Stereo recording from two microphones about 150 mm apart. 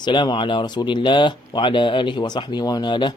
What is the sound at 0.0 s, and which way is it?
Speech, 30° left (ahead or behind).